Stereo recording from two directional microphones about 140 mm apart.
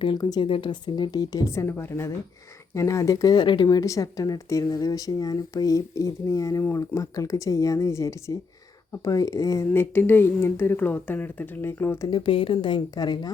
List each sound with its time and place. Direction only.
0.0 s a woman's voice: 30° left (ahead or behind)
12.1 s a woman's voice: 40° left (ahead or behind)